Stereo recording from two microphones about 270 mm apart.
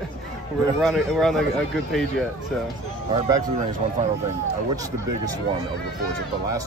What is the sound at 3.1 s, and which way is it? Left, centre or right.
Speech, centre.